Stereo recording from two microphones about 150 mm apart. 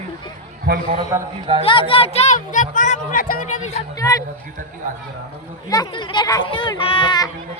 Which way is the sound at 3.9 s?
25° left (ahead or behind).